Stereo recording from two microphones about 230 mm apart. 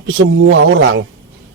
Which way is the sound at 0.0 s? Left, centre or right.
Right.